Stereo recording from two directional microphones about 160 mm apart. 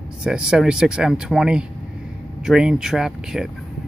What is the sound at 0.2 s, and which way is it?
Speech, 5° right (ahead or behind).